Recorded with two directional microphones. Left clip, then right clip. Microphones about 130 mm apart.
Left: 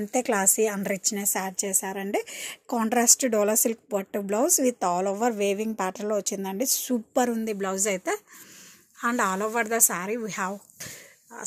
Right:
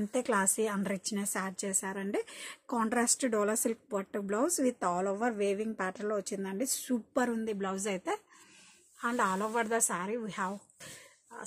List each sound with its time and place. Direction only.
0.1 s a woman's voice: 25° left (ahead or behind)
7.5 s speech: 45° left (ahead or behind)